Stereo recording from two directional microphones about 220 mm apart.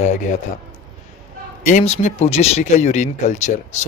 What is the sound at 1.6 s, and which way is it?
Speech, 30° left (ahead or behind).